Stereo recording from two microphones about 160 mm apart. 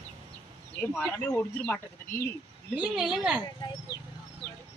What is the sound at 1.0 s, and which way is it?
Speech, 10° left (ahead or behind).